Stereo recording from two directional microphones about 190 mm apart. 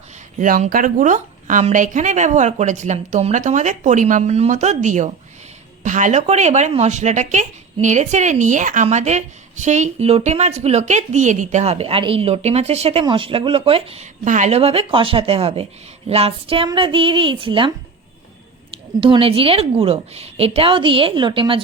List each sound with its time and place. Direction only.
0.3 s a woman's voice: 45° right (ahead or behind); by 17.7 s 25° right (ahead or behind)
18.7 s a woman's voice: 25° right (ahead or behind)